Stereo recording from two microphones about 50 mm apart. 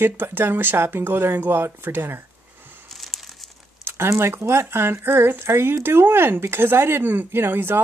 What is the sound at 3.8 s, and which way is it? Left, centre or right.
Speech, right.